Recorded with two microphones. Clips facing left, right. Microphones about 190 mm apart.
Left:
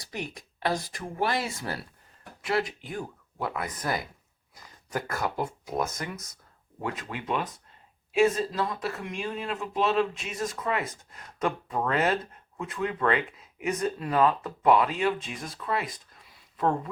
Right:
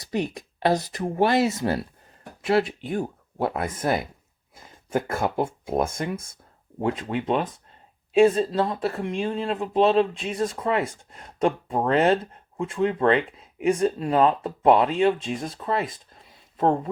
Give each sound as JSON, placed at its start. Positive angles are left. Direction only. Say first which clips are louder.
{"t": 0.0, "sound": "speech", "louder": "right 9 dB", "side_deg": -25}